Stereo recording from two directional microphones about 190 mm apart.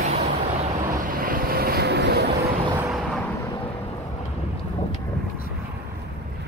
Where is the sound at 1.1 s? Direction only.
50° right (ahead or behind).